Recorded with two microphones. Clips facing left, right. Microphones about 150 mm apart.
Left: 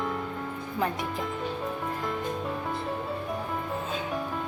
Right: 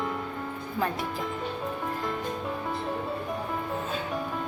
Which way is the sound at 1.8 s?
Centre (ahead or behind).